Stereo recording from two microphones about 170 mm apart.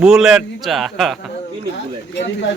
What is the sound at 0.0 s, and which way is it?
A man's voice, 5° right (ahead or behind).